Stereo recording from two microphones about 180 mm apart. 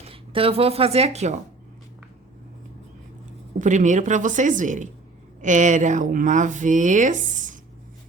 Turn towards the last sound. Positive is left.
turn(degrees=-45)  # may be behind; listen again after turning